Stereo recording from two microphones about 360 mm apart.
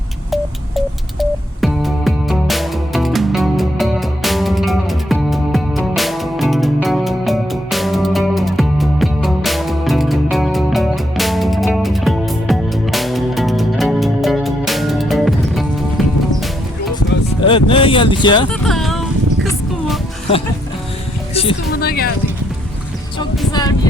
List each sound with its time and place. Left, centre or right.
1.2 s music: centre
17.4 s a sound: centre
18.6 s a sound: centre
19.4 s music: centre
21.3 s speech: left
23.5 s music: centre